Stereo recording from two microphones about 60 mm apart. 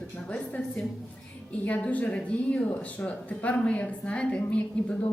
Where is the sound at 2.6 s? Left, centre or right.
Left.